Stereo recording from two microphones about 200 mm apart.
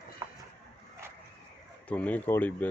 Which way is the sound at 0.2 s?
20° right (ahead or behind).